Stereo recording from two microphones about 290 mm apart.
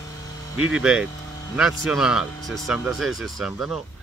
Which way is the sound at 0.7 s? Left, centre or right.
Centre.